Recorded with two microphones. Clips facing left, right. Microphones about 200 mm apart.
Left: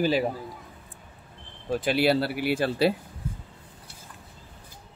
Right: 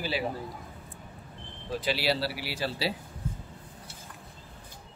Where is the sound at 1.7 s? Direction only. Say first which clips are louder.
Left 6 dB; 50° left (ahead or behind).